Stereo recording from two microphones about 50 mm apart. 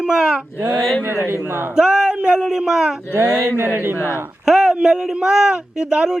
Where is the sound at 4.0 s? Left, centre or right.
Left.